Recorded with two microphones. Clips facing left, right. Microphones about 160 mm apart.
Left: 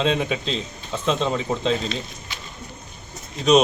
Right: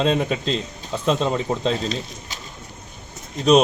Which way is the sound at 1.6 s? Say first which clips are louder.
Even; 40° right (ahead or behind).